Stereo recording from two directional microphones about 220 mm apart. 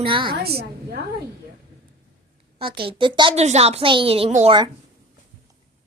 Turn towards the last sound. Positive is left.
turn(degrees=-25)  # may be behind; listen again after turning